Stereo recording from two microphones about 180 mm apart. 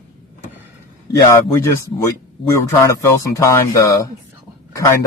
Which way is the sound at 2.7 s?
20° left (ahead or behind).